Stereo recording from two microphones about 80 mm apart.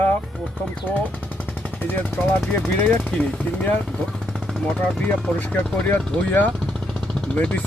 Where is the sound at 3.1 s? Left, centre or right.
Centre.